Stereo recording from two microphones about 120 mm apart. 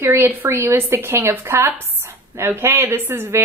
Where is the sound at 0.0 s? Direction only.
20° right (ahead or behind).